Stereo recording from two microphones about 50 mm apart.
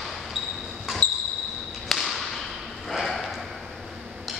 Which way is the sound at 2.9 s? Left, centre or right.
Centre.